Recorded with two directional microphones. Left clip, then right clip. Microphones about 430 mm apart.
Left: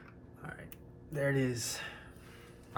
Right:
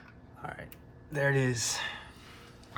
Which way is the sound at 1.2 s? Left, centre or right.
Right.